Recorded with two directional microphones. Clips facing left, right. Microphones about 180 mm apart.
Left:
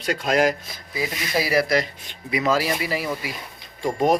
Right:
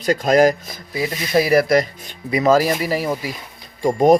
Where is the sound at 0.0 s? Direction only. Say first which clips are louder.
Right 6 dB; 40° right (ahead or behind).